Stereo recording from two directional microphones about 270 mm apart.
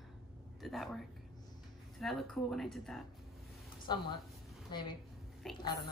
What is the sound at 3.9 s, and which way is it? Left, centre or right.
Speech, centre.